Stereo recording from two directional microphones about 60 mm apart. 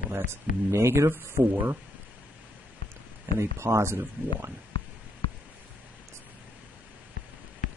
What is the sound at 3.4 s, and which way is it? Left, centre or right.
A man's voice, right.